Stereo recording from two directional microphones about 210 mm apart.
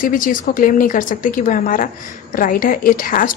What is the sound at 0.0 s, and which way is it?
A woman's voice, 40° left (ahead or behind).